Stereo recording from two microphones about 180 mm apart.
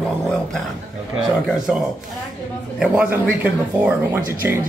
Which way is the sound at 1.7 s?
5° right (ahead or behind).